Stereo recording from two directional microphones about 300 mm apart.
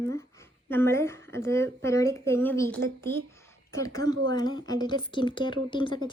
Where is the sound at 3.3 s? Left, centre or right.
Centre.